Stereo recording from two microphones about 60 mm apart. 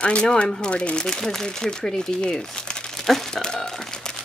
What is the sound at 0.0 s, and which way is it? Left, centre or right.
Speech, centre.